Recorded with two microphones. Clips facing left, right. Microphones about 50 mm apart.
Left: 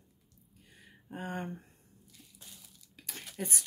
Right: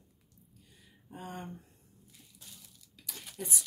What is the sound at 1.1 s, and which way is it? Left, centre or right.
Speech, left.